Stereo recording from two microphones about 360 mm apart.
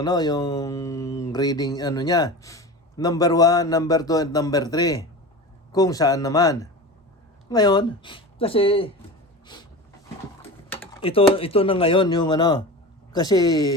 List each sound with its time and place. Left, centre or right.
0.0 s speech: centre
10.7 s typing: centre
11.3 s speech: centre